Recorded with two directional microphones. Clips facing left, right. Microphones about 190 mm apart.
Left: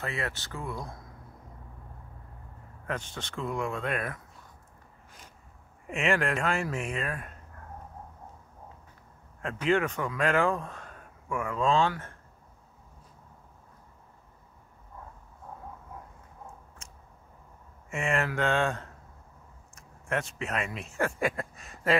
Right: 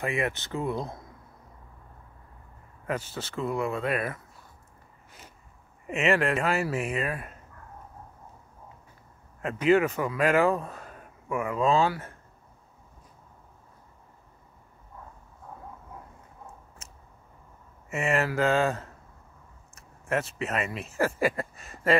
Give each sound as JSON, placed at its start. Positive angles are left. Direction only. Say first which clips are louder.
{"t": 0.0, "sound": "speech", "louder": "right 6 dB", "side_deg": -15}
{"t": 2.9, "sound": "speech", "louder": "right 3 dB", "side_deg": -5}
{"t": 5.9, "sound": "speech", "louder": "right 3 dB", "side_deg": 0}
{"t": 9.4, "sound": "speech", "louder": "right 5 dB", "side_deg": -5}
{"t": 16.8, "sound": "a sound", "louder": "right 1 dB", "side_deg": -5}
{"t": 17.8, "sound": "speech", "louder": "right 3 dB", "side_deg": -5}